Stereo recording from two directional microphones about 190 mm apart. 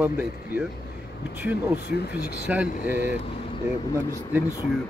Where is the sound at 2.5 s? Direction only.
5° right (ahead or behind).